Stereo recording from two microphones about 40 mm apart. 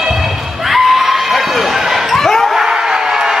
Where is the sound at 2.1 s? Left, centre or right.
Centre.